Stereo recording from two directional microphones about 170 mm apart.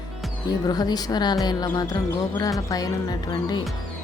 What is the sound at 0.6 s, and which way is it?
Speech, 25° left (ahead or behind).